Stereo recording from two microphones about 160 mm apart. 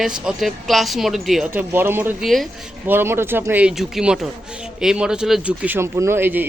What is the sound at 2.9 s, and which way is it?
Speech, 15° right (ahead or behind).